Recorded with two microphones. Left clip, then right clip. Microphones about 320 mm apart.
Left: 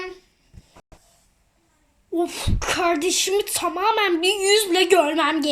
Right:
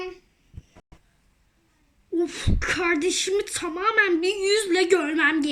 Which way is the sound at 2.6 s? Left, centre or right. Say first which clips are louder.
Left 2 dB; centre.